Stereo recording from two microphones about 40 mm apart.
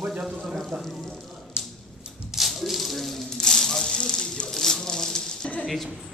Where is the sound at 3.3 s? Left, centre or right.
Centre.